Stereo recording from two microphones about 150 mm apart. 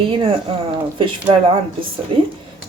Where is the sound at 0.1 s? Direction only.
40° right (ahead or behind).